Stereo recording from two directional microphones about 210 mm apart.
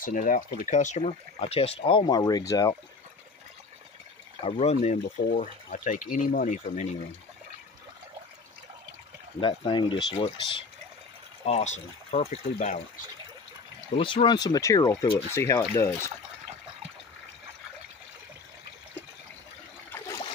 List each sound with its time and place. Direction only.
0.0 s speech: 40° left (ahead or behind); by 2.7 s 15° left (ahead or behind)
4.4 s speech: 30° left (ahead or behind)
9.4 s speech: 20° left (ahead or behind)
13.9 s speech: 25° left (ahead or behind)